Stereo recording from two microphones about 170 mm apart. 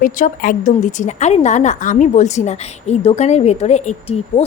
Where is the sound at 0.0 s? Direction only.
50° left (ahead or behind).